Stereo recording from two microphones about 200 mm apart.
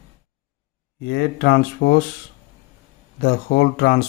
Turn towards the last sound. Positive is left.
turn(degrees=50)  # may be behind; listen again after turning